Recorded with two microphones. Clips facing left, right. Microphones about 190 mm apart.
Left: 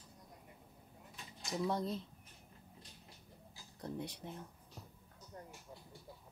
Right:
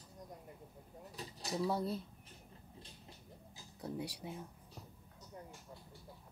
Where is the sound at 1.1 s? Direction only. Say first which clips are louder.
Right 2 dB; 35° right (ahead or behind).